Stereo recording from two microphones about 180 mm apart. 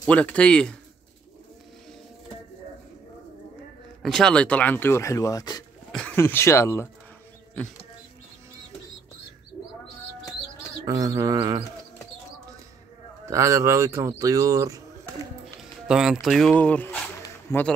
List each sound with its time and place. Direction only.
0.0 s speech: 5° left (ahead or behind)
4.0 s speech: 5° left (ahead or behind); by 5.6 s 20° left (ahead or behind)
5.9 s speech: 5° left (ahead or behind)
10.9 s a sound: 20° right (ahead or behind)
13.2 s speech: 15° right (ahead or behind)
15.4 s speech: 5° right (ahead or behind)
17.2 s zipper: 15° left (ahead or behind)